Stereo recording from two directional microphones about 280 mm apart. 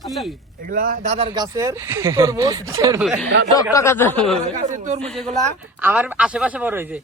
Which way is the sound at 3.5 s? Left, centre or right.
Centre.